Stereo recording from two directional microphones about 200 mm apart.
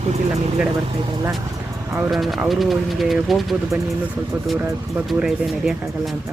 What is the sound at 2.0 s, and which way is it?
Speech, 5° right (ahead or behind).